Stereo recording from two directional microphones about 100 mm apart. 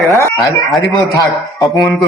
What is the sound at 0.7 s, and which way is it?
Speech, centre (ahead or behind).